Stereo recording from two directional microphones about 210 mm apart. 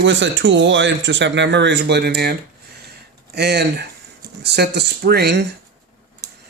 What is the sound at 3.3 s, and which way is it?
Speech, 50° right (ahead or behind).